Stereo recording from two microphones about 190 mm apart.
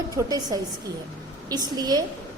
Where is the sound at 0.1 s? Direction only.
20° right (ahead or behind).